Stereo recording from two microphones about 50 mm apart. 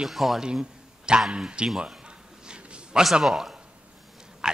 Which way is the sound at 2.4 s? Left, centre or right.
Centre.